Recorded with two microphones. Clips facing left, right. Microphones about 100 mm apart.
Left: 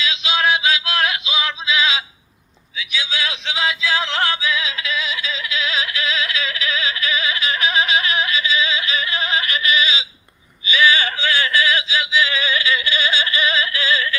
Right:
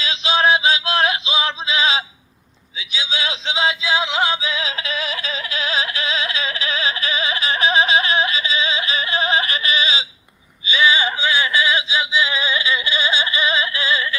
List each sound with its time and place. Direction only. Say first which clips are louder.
0.0 s male singing: right 2 dB; 35° right (ahead or behind)
2.7 s music: left 1 dB; 25° right (ahead or behind)
10.7 s yodeling: even; 20° right (ahead or behind)